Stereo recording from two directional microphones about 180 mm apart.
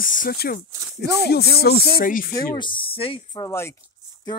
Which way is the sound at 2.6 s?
30° left (ahead or behind).